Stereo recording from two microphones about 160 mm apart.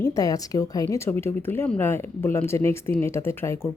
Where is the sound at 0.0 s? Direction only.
20° left (ahead or behind).